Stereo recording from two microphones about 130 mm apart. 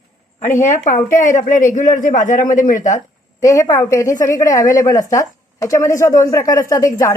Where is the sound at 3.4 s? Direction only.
25° left (ahead or behind).